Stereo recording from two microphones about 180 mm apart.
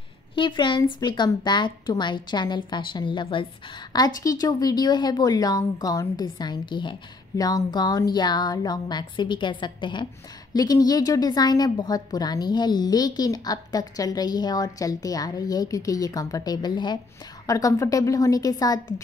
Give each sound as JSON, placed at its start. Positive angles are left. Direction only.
{"t": 0.4, "sound": "a woman's voice", "side_deg": 25}